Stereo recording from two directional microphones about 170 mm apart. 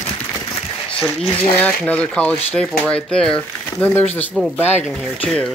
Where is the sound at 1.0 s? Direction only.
10° left (ahead or behind).